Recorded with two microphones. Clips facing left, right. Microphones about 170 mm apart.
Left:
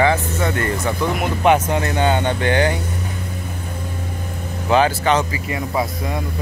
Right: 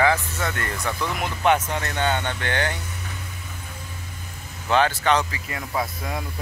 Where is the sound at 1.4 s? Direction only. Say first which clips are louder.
Left 5 dB; 10° left (ahead or behind).